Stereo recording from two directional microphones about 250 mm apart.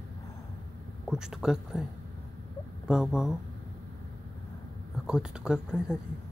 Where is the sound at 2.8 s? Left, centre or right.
Centre.